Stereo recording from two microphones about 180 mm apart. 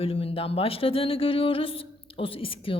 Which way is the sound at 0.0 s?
30° left (ahead or behind).